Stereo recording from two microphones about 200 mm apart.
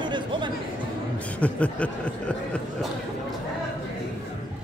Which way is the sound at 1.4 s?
5° left (ahead or behind).